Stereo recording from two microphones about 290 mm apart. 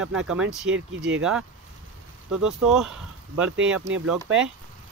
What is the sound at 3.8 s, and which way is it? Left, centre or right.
Speech, right.